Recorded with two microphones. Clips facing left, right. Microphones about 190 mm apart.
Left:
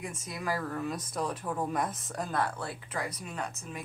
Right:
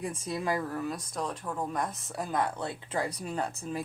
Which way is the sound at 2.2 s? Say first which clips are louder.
Right 2 dB; 20° right (ahead or behind).